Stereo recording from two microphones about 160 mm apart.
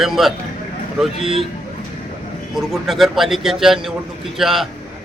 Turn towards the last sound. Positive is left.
turn(degrees=0)  # may be behind; listen again after turning